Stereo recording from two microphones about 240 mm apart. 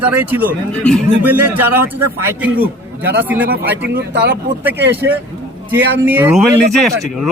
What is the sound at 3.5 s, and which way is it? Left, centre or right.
Speech, right.